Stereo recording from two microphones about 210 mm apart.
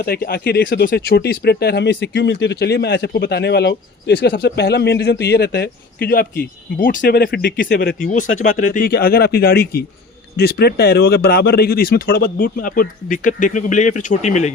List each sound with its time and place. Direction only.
0.0 s speech: 45° left (ahead or behind)